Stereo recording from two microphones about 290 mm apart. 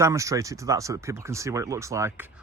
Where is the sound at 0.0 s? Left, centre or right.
Centre.